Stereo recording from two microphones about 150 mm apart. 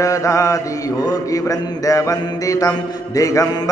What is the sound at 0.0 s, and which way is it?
Mantra, 20° left (ahead or behind).